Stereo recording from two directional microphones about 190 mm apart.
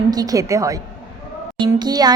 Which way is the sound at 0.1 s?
20° right (ahead or behind).